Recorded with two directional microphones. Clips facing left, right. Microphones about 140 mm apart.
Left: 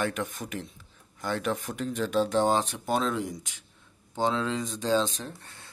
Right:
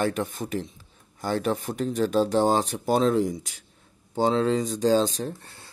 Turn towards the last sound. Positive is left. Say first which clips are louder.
# right 8 dB
turn(degrees=-35)  # may be behind; listen again after turning